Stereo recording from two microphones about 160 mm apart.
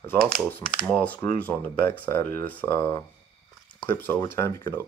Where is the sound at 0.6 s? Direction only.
5° left (ahead or behind).